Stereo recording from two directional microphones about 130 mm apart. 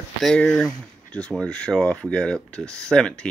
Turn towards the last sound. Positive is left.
turn(degrees=5)  # may be behind; listen again after turning